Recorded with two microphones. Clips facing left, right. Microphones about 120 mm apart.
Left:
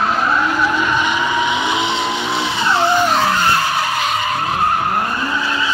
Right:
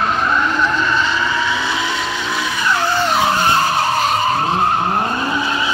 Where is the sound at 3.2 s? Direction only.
20° right (ahead or behind).